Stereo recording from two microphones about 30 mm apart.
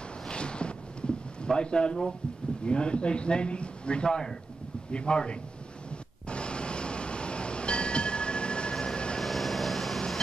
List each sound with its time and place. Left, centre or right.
0.3 s a sound: left
2.6 s a man's voice: left
5.9 s vehicle: left
9.2 s vehicle: centre